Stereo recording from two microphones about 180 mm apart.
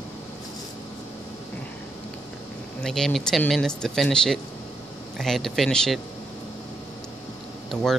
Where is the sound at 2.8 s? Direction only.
Centre (ahead or behind).